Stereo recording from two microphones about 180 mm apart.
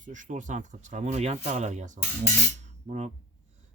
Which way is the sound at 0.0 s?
45° right (ahead or behind).